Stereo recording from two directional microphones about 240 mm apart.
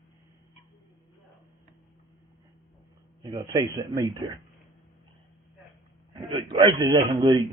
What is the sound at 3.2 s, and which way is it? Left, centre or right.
Speech, centre.